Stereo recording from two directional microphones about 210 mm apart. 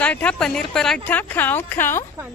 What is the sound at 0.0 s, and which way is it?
Speech, 5° left (ahead or behind).